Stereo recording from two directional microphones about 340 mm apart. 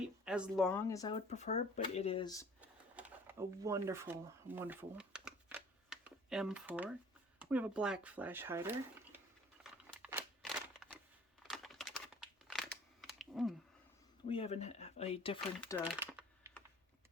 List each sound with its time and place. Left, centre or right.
0.3 s speech: centre
2.6 s a sound: centre
7.3 s speech: centre
9.8 s crumpling: centre
11.4 s computer keyboard: centre
14.3 s speech: centre
16.0 s typing: centre